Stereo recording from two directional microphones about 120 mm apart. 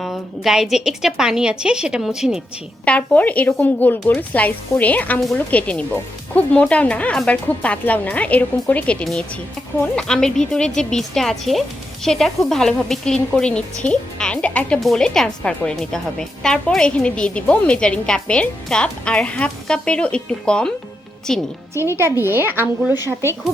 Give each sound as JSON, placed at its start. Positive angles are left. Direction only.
{"t": 0.0, "sound": "a woman's voice", "side_deg": 0}
{"t": 2.8, "sound": "a woman's voice", "side_deg": 10}
{"t": 21.8, "sound": "speech", "side_deg": -20}